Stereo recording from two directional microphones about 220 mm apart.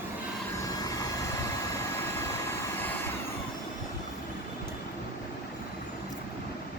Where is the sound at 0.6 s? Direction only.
15° left (ahead or behind).